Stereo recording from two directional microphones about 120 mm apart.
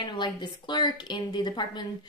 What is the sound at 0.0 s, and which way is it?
A woman's voice, 40° left (ahead or behind).